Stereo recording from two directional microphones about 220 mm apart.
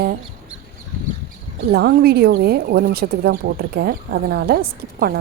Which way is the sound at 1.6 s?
45° right (ahead or behind).